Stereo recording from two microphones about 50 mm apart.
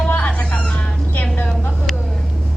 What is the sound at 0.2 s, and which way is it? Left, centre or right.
Music, left.